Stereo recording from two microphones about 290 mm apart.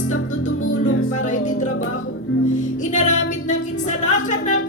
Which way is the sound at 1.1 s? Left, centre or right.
Left.